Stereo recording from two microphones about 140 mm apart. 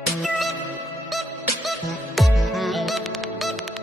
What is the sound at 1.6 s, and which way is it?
Music, centre (ahead or behind).